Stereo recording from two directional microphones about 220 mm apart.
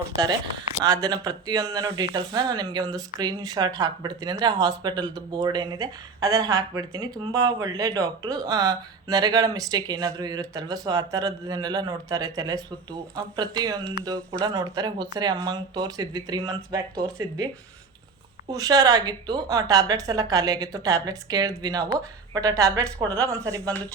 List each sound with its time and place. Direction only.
0.9 s speech: 15° right (ahead or behind)